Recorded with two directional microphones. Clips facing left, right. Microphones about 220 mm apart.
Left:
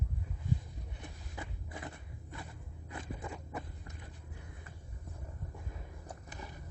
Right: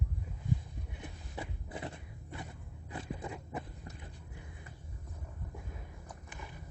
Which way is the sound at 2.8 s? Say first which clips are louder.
Right 2 dB; 20° right (ahead or behind).